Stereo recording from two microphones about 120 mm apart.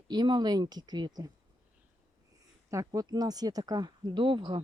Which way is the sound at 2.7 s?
30° right (ahead or behind).